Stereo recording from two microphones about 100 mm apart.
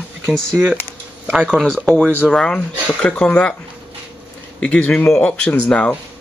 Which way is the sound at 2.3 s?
5° left (ahead or behind).